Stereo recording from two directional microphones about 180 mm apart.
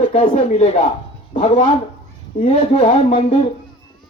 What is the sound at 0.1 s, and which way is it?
Speech, 35° left (ahead or behind).